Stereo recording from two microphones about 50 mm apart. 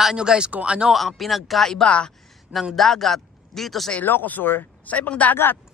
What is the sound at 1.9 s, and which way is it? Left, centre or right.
Speech, left.